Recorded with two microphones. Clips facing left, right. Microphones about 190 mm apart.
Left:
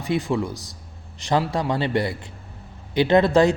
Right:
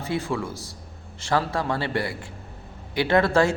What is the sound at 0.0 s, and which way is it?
A man's voice, 15° left (ahead or behind).